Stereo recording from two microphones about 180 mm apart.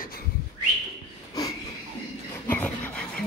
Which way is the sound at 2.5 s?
5° left (ahead or behind).